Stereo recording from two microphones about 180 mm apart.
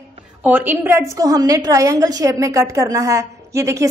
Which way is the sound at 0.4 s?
10° right (ahead or behind).